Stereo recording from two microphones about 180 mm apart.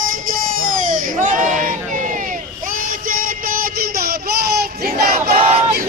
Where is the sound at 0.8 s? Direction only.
45° right (ahead or behind).